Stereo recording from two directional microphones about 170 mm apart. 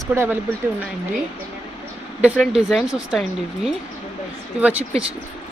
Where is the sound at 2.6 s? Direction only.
Centre (ahead or behind).